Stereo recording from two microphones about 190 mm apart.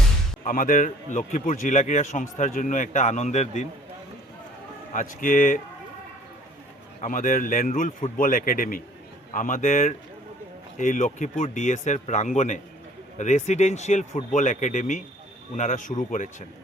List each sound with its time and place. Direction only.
0.4 s a man's voice: 45° left (ahead or behind)
4.9 s a man's voice: 45° left (ahead or behind)
7.0 s a man's voice: 45° left (ahead or behind)